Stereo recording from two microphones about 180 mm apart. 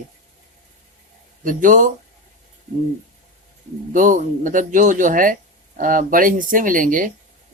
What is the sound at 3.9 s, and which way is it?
Speech, 45° right (ahead or behind).